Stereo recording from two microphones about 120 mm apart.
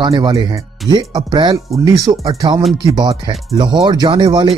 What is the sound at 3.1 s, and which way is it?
Speech, 60° right (ahead or behind).